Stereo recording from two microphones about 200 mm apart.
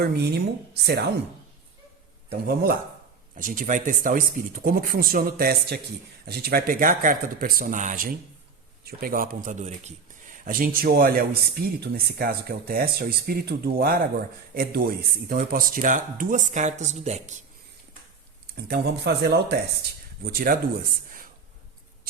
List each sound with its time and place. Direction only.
0.0 s a woman's voice: 55° right (ahead or behind)
3.3 s speech: 45° right (ahead or behind)
18.5 s speech: 55° right (ahead or behind)